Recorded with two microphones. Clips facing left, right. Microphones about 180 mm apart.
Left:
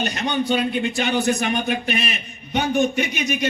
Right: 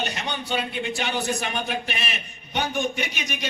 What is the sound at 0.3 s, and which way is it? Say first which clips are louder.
Speech: left 7 dB; 55° left (ahead or behind).